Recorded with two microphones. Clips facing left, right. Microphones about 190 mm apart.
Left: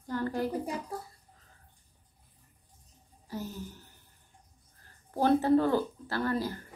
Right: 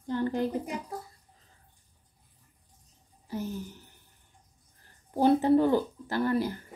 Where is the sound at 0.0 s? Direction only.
20° right (ahead or behind).